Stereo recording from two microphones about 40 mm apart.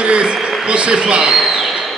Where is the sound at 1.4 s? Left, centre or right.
Centre.